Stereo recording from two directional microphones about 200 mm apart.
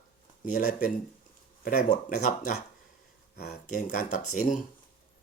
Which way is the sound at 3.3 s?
50° left (ahead or behind).